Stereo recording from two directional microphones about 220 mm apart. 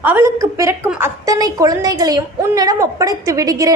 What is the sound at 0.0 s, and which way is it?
A woman's voice, 10° right (ahead or behind).